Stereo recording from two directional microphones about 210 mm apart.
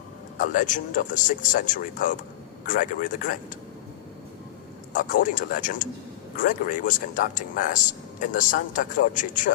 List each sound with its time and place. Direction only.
0.3 s speech: 40° left (ahead or behind)
4.9 s speech: 40° left (ahead or behind)